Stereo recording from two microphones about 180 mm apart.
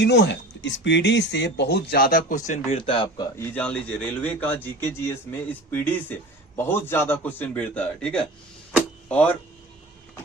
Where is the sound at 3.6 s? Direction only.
5° left (ahead or behind).